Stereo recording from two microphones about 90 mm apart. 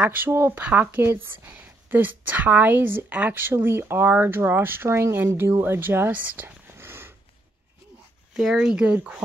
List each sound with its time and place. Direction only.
0.0 s speech: 20° right (ahead or behind)
8.4 s speech: 5° right (ahead or behind)